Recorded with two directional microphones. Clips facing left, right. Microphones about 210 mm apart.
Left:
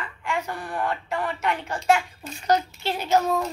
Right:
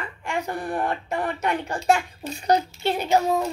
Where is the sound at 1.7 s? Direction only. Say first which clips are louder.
Left 1 dB; 30° right (ahead or behind).